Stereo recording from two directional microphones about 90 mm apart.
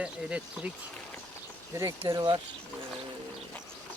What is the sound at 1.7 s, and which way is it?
Speech, 30° right (ahead or behind).